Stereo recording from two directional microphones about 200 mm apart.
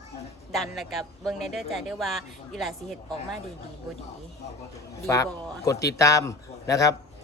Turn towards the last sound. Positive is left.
turn(degrees=15)  # may be behind; listen again after turning